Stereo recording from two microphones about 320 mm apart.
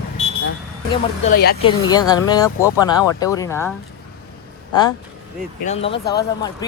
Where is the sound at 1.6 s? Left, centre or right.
Centre.